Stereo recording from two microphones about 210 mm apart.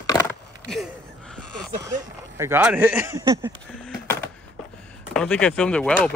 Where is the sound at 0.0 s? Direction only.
20° left (ahead or behind).